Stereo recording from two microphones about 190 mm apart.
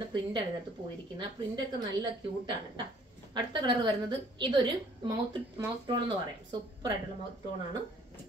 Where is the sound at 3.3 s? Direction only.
25° right (ahead or behind).